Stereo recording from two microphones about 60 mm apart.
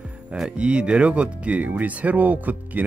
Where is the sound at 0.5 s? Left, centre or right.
Centre.